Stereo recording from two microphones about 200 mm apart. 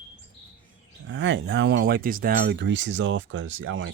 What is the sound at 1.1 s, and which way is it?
Speech, 65° right (ahead or behind).